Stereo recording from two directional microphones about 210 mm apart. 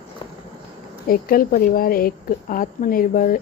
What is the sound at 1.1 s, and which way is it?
A woman's voice, 45° left (ahead or behind).